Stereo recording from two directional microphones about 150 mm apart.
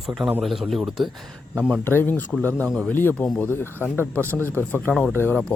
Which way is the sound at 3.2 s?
Centre (ahead or behind).